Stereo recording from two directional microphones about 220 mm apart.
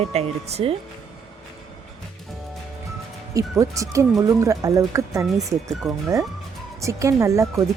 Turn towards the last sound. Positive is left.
turn(degrees=-15)  # may be behind; listen again after turning